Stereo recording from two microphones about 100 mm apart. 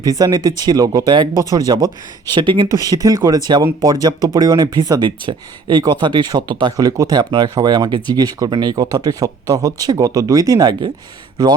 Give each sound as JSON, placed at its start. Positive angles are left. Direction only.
{"t": 0.0, "sound": "speech", "side_deg": -40}
{"t": 2.3, "sound": "speech", "side_deg": -50}
{"t": 2.7, "sound": "speech", "side_deg": -40}